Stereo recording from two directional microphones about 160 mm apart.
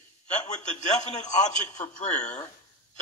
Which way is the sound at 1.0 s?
45° left (ahead or behind).